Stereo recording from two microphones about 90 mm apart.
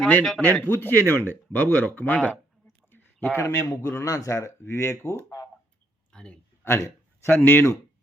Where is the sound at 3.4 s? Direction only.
35° left (ahead or behind).